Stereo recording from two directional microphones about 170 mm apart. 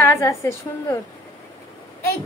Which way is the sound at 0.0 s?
15° left (ahead or behind).